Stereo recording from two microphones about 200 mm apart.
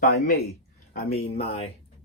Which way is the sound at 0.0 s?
50° left (ahead or behind).